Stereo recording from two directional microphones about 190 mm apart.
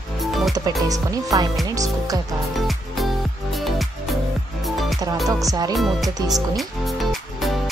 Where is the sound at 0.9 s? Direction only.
20° right (ahead or behind).